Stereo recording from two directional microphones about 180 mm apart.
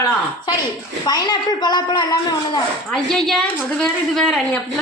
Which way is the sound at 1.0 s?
20° left (ahead or behind).